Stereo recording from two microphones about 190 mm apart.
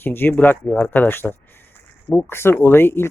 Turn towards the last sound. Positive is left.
turn(degrees=10)  # may be behind; listen again after turning